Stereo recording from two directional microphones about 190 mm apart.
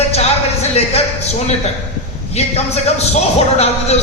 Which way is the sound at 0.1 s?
35° left (ahead or behind).